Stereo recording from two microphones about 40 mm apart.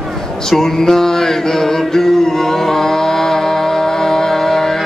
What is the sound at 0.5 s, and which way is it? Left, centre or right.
Mantra, centre.